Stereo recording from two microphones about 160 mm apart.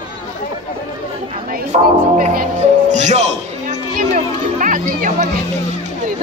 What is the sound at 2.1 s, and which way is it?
Music, 60° right (ahead or behind).